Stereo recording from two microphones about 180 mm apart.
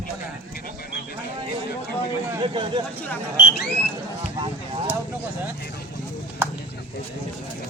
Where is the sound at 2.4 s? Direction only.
25° right (ahead or behind).